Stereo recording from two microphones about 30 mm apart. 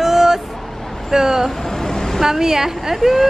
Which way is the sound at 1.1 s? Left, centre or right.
Right.